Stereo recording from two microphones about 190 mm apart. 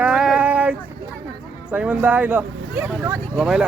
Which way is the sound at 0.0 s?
5° right (ahead or behind).